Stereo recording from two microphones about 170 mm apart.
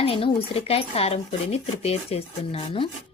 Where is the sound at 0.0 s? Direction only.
35° left (ahead or behind).